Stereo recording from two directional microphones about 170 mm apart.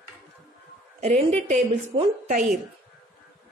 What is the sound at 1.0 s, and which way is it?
Speech, 40° right (ahead or behind).